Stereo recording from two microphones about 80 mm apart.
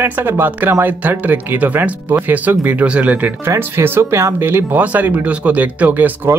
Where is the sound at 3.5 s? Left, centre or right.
Right.